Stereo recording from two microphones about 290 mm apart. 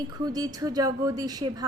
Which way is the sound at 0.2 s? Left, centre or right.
Centre.